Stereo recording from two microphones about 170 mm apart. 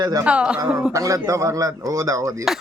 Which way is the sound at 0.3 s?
5° right (ahead or behind).